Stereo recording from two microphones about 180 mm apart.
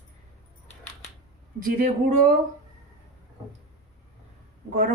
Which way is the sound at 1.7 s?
45° right (ahead or behind).